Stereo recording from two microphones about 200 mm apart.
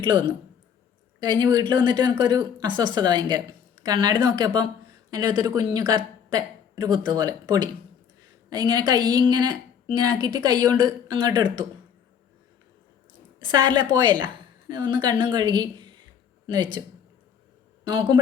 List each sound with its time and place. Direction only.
0.0 s a woman's voice: 20° right (ahead or behind)
13.4 s a woman's voice: 25° right (ahead or behind)
17.8 s a woman's voice: 20° right (ahead or behind)